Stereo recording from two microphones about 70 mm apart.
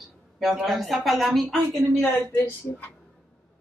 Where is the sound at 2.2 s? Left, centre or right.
Left.